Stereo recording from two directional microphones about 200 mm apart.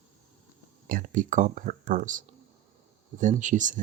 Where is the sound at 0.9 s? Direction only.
40° right (ahead or behind).